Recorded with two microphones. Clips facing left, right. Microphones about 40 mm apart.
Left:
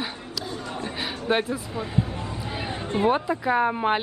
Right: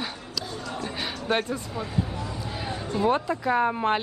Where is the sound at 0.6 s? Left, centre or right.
Left.